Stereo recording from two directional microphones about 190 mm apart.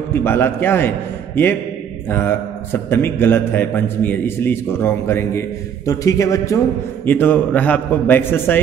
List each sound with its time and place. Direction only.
0.1 s a man's voice: 10° left (ahead or behind)